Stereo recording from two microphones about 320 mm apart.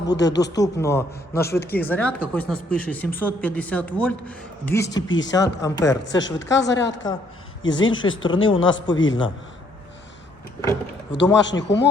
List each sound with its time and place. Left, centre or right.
0.1 s speech: left
0.5 s a man's voice: centre
5.0 s speech: left
5.3 s a man's voice: centre
6.1 s speech: left
11.1 s speech: left